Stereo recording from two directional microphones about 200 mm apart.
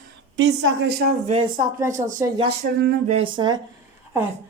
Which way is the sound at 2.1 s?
20° right (ahead or behind).